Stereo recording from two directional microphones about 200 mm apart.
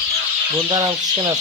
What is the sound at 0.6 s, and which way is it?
Speech, 20° right (ahead or behind).